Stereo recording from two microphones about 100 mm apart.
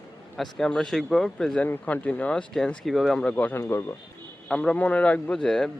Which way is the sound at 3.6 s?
25° left (ahead or behind).